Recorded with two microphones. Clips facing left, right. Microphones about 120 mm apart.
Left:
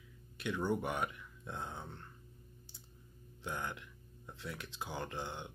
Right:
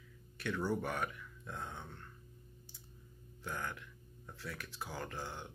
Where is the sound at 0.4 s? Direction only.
20° left (ahead or behind).